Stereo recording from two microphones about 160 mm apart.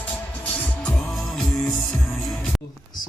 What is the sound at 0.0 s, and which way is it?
Music, 10° left (ahead or behind).